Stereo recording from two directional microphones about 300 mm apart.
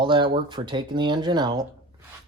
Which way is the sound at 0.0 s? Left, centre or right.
Centre.